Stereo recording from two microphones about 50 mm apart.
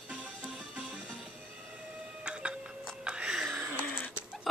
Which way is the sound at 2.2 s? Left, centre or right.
Right.